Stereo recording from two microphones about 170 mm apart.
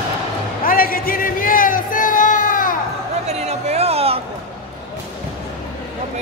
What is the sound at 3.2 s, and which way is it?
Music, 40° right (ahead or behind).